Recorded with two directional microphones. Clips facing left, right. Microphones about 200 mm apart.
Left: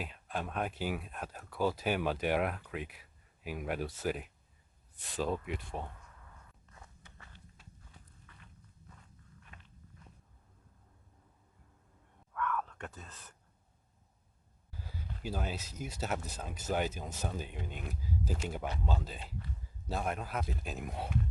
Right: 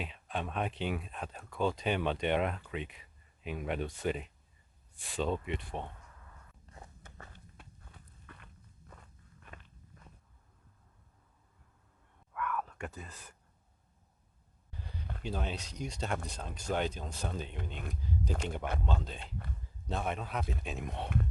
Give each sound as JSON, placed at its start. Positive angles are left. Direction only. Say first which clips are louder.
{"t": 0.0, "sound": "speech", "louder": "right 1 dB", "side_deg": 0}
{"t": 6.7, "sound": "walk", "louder": "right 5 dB", "side_deg": -35}
{"t": 7.0, "sound": "walk", "louder": "right 5 dB", "side_deg": -50}
{"t": 12.3, "sound": "a sound", "louder": "left 1 dB", "side_deg": -10}
{"t": 14.7, "sound": "a sound", "louder": "right 1 dB", "side_deg": 5}
{"t": 15.2, "sound": "speech", "louder": "even", "side_deg": 5}